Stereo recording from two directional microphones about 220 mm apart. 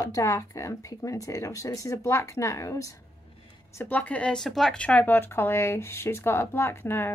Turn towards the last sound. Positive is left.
turn(degrees=10)  # may be behind; listen again after turning